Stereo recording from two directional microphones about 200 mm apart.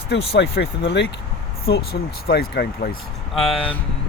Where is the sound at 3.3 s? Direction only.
Centre (ahead or behind).